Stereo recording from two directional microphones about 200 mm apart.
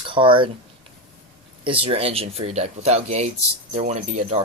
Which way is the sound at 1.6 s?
25° right (ahead or behind).